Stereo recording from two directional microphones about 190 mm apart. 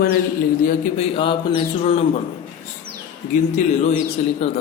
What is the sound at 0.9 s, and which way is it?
Speech, 30° left (ahead or behind).